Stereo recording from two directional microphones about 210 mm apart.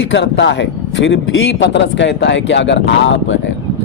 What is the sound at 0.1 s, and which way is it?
A man's voice, 60° left (ahead or behind).